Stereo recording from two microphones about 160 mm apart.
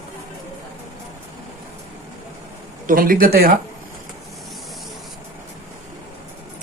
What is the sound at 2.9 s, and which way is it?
Speech, 60° right (ahead or behind).